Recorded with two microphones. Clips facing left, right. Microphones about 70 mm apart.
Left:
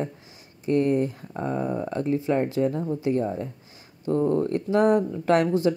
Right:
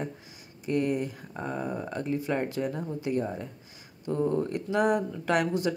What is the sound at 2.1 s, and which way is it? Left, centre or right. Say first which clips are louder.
Speech: left 5 dB; left.